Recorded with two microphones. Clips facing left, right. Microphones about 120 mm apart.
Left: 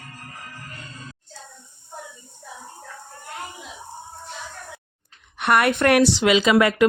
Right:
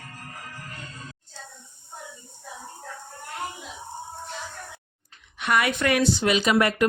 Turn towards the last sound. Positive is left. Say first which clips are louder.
# left 4 dB
turn(degrees=90)